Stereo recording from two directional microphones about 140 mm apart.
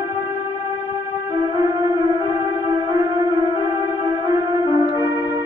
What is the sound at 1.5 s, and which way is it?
Music, 25° right (ahead or behind).